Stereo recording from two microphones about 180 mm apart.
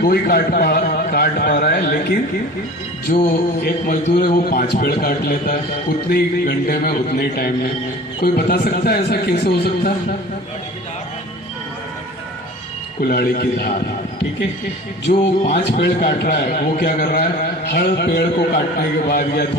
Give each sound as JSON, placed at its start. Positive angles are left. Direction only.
{"t": 0.0, "sound": "a man's voice", "side_deg": 60}
{"t": 3.1, "sound": "music", "side_deg": 40}
{"t": 4.1, "sound": "a man's voice", "side_deg": 55}
{"t": 13.0, "sound": "a man's voice", "side_deg": 55}
{"t": 15.1, "sound": "a man's voice", "side_deg": 50}